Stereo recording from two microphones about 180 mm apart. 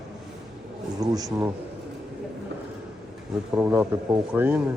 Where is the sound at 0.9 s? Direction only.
20° right (ahead or behind).